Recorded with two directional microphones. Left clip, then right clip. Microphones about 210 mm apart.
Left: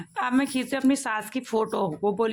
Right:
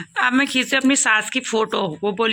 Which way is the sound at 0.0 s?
Centre (ahead or behind).